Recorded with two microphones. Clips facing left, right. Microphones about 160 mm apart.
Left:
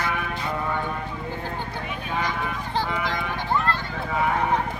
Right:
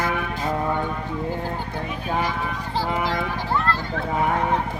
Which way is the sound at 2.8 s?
35° right (ahead or behind).